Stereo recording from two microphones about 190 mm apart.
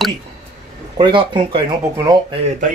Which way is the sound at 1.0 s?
25° right (ahead or behind).